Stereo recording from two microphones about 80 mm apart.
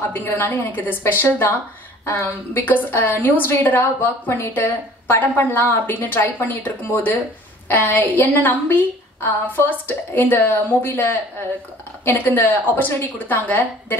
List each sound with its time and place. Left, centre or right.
0.1 s a woman's voice: left